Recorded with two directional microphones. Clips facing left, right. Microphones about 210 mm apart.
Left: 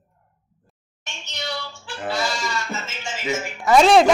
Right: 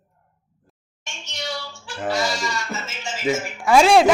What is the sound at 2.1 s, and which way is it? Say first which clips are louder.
Goat: right 1 dB; 10° right (ahead or behind).